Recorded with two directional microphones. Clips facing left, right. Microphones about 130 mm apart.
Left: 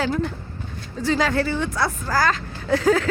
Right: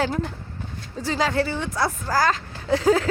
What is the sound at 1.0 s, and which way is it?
A woman's voice, 30° right (ahead or behind).